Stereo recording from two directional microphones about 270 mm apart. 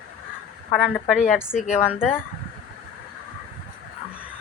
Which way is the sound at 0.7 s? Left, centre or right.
Centre.